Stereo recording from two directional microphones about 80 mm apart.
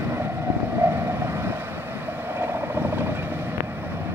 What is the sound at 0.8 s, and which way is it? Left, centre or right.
Vehicle, right.